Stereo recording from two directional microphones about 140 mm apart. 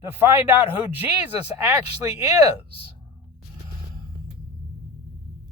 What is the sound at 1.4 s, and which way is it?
Speech, 45° left (ahead or behind).